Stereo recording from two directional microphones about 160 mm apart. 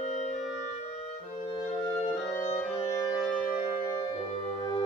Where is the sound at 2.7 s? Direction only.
30° left (ahead or behind).